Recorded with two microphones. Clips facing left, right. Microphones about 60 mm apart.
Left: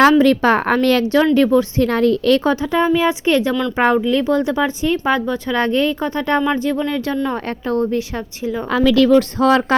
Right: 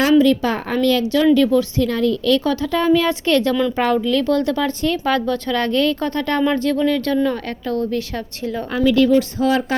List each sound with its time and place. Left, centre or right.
0.0 s a woman's voice: left
1.2 s a woman's voice: left; by 8.6 s centre
8.7 s speech: left